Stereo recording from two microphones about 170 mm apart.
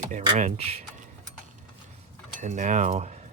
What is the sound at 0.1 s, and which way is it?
Speech, 45° right (ahead or behind).